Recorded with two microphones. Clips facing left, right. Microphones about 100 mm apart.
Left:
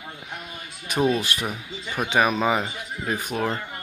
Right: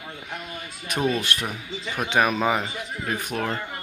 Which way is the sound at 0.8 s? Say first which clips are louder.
Left 2 dB; centre (ahead or behind).